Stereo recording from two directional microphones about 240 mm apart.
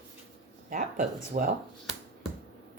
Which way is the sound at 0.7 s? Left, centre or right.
Right.